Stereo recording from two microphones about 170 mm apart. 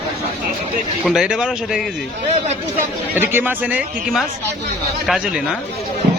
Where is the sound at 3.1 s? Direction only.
10° right (ahead or behind).